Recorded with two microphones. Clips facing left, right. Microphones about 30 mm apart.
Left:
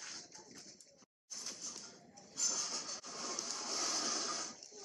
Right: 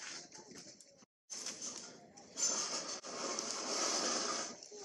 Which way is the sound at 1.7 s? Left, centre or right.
Centre.